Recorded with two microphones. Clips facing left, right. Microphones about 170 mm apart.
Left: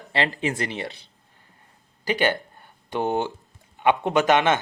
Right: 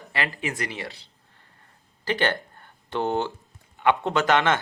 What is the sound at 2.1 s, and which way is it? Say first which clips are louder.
Speech: left 2 dB; 15° left (ahead or behind).